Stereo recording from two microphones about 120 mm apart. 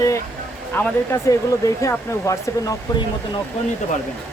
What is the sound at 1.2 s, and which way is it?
Speech, 25° left (ahead or behind).